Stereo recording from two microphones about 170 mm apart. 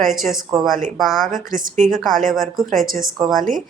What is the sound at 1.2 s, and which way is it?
A woman's voice, 50° right (ahead or behind).